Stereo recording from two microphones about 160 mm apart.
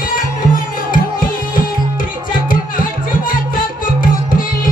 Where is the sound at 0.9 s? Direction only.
60° left (ahead or behind).